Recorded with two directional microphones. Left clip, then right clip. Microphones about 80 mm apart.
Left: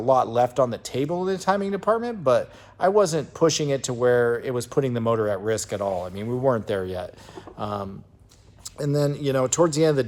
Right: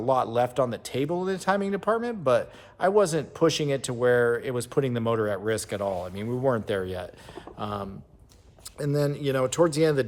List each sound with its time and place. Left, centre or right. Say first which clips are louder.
0.0 s speech: left 4 dB; right
6.4 s speech: left 3 dB; right